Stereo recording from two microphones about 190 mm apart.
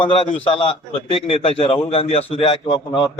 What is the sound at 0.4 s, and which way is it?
A man's voice, 30° left (ahead or behind).